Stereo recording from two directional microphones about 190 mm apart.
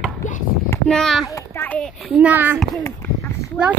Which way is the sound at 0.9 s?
Centre (ahead or behind).